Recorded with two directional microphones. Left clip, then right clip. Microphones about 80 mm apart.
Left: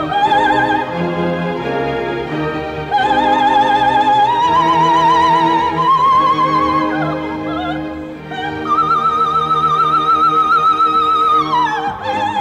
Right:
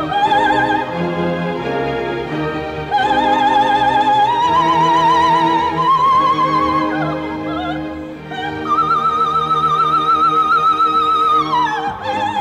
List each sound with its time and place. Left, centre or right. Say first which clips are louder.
0.1 s opera: left 1 dB; right
2.9 s opera: left 1 dB; right
8.6 s music: left 1 dB; right